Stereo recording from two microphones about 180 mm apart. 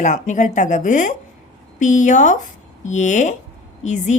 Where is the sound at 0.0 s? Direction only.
45° left (ahead or behind).